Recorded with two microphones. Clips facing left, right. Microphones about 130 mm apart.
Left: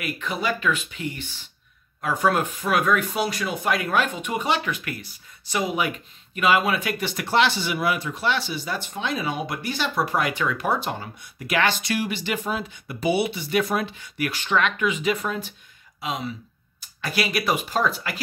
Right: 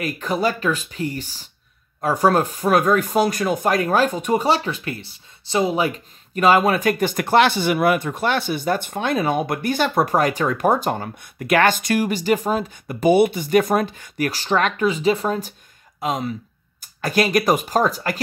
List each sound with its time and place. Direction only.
0.0 s speech: 40° right (ahead or behind)